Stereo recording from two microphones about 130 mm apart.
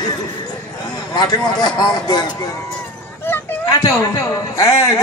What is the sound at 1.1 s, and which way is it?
A man's voice, 35° left (ahead or behind).